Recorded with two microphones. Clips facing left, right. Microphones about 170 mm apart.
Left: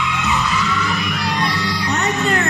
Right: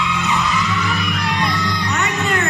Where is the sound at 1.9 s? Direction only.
35° left (ahead or behind).